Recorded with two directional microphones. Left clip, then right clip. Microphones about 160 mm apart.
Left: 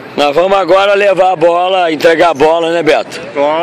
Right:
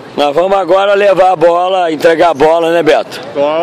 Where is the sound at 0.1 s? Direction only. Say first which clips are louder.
Left 1 dB; centre (ahead or behind).